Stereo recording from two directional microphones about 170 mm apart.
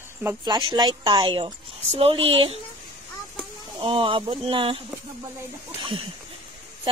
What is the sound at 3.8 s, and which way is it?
Speech, 30° right (ahead or behind).